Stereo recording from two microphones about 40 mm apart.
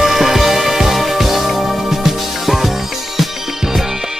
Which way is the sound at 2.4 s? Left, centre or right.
Centre.